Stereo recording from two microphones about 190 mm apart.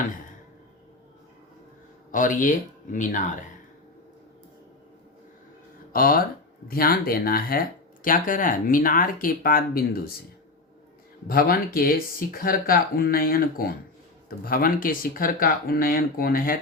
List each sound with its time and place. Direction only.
2.1 s speech: 45° left (ahead or behind)
5.9 s speech: 50° left (ahead or behind)
11.3 s speech: 50° left (ahead or behind)